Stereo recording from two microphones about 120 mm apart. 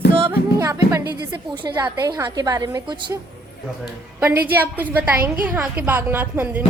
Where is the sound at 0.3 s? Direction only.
25° right (ahead or behind).